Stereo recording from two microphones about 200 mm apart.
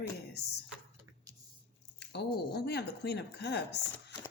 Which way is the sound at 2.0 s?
55° left (ahead or behind).